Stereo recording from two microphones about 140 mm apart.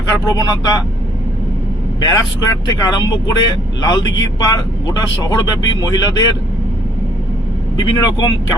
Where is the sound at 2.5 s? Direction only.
25° left (ahead or behind).